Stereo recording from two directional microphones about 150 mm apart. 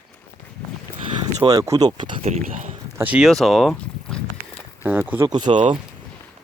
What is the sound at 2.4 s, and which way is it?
Speech, 55° right (ahead or behind).